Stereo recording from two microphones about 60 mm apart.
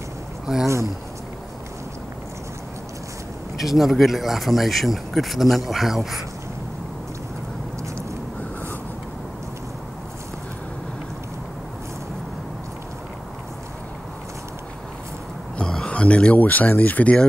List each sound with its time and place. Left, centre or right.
0.5 s speech: centre
3.5 s speech: centre
15.5 s a sound: centre
16.3 s speech: left